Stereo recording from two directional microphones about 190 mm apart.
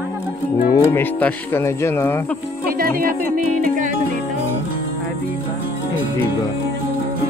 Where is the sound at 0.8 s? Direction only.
10° left (ahead or behind).